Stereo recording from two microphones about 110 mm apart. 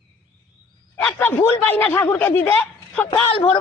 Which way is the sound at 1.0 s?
10° left (ahead or behind).